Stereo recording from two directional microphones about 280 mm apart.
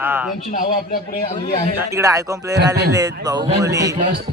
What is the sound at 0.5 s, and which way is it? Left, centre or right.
A man's voice, left.